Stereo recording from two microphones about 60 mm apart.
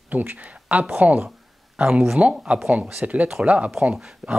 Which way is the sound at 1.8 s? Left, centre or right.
Centre.